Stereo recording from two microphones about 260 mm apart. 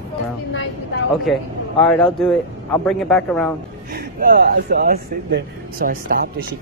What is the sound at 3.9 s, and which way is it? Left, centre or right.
Speech, right.